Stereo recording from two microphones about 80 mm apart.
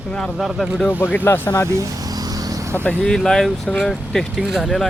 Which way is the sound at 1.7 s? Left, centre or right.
Right.